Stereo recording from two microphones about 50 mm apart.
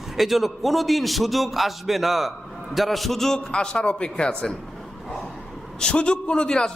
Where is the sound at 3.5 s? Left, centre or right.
Centre.